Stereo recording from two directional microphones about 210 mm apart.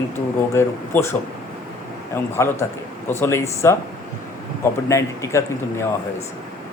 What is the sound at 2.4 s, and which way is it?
Speech, 15° left (ahead or behind).